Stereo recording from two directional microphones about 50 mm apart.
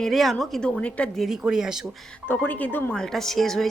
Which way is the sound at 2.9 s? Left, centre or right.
Centre.